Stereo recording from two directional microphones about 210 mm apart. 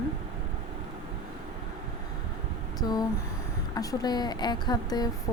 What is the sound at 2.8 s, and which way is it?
A woman's voice, 20° left (ahead or behind).